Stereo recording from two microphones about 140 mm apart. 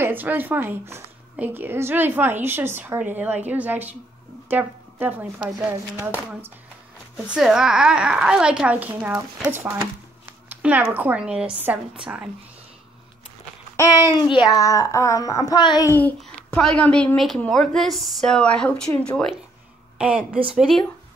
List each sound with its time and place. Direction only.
0.0 s speech: 15° right (ahead or behind)
7.2 s speech: 5° right (ahead or behind)
14.1 s a child's voice: 35° left (ahead or behind)
15.9 s a child's voice: 15° left (ahead or behind)
20.0 s a woman's voice: 5° right (ahead or behind)